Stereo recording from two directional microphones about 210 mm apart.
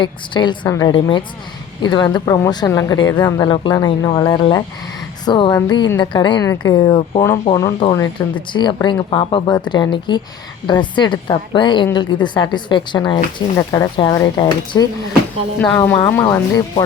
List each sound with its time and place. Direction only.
0.0 s speech: 20° left (ahead or behind)
15.6 s speech: 10° left (ahead or behind)